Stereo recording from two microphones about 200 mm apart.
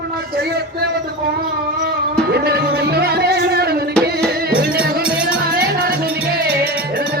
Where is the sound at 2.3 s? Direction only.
50° right (ahead or behind).